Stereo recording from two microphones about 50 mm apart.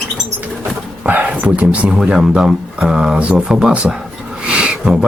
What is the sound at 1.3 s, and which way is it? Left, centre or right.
Speech, right.